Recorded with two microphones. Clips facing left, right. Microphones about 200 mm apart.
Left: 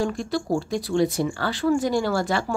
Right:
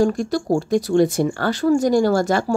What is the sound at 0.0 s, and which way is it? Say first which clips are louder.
A woman's voice: right 6 dB; 45° right (ahead or behind).